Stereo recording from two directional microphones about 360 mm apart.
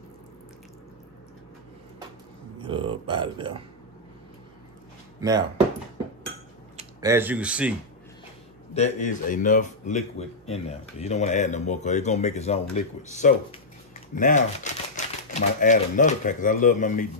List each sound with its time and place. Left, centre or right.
2.6 s speech: centre
5.2 s speech: centre
6.8 s speech: centre
8.7 s a man's voice: centre